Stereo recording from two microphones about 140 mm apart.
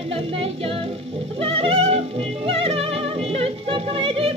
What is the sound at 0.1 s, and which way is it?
Music, 45° right (ahead or behind).